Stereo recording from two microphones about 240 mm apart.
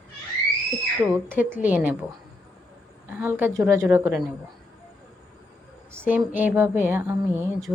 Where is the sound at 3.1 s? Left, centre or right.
Centre.